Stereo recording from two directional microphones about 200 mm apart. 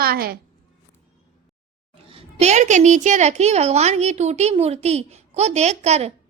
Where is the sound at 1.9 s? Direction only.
30° right (ahead or behind).